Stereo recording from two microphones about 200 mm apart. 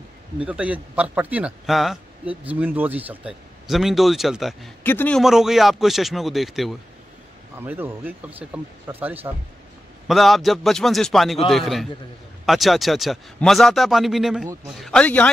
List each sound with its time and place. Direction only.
0.5 s a man's voice: 5° right (ahead or behind)
7.5 s a man's voice: 10° right (ahead or behind); by 15.2 s 5° left (ahead or behind)